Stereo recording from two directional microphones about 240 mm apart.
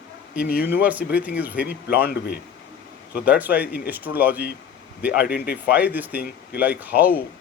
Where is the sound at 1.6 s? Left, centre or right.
Left.